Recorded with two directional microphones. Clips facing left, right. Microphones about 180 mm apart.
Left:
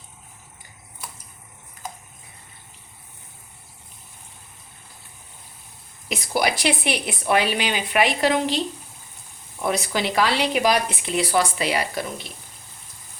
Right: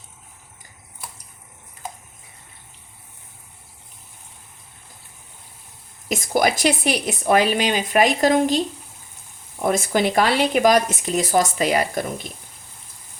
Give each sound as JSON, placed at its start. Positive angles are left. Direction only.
{"t": 6.1, "sound": "speech", "side_deg": -45}